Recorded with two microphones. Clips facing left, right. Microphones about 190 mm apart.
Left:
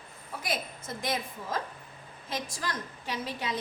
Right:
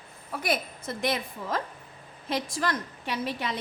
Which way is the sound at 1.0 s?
70° right (ahead or behind).